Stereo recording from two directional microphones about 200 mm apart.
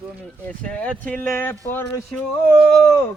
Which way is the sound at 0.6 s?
5° left (ahead or behind).